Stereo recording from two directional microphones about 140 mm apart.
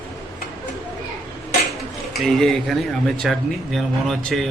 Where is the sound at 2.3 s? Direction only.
Centre (ahead or behind).